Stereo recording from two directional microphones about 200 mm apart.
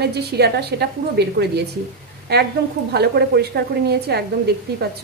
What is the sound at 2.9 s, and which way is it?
A woman's voice, 55° right (ahead or behind).